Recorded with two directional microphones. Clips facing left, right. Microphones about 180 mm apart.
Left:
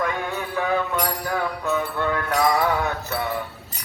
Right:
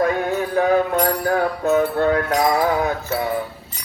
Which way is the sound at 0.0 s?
40° right (ahead or behind).